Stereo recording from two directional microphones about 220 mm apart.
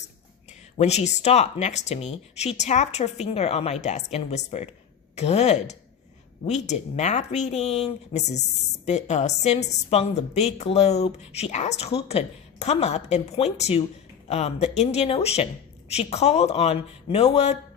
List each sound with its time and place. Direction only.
0.8 s a woman's voice: 30° left (ahead or behind)